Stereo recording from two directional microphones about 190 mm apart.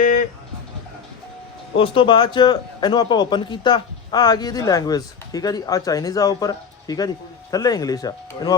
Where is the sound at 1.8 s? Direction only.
25° left (ahead or behind).